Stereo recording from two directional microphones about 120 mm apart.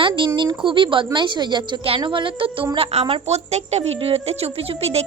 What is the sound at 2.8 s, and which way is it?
Speech, 55° right (ahead or behind).